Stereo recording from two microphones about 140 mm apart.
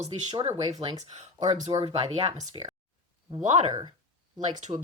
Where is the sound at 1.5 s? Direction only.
60° right (ahead or behind).